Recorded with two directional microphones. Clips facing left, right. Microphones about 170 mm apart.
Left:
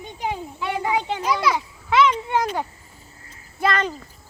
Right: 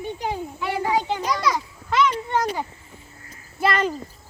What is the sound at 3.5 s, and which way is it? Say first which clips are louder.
Speech: right 1 dB; 5° right (ahead or behind).